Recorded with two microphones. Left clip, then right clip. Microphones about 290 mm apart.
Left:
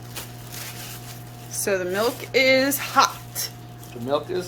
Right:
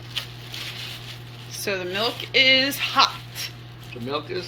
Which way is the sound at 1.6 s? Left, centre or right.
Centre.